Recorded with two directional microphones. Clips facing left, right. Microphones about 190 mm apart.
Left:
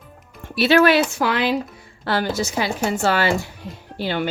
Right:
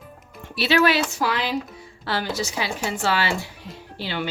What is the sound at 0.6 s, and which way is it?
Dishes, 50° left (ahead or behind).